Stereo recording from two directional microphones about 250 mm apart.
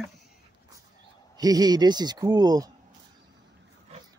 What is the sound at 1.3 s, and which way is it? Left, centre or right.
Speech, centre.